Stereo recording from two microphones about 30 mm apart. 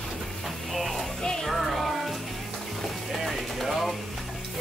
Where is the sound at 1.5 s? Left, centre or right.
Centre.